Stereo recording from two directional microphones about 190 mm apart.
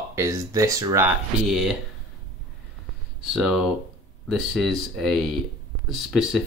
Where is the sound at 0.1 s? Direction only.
15° right (ahead or behind).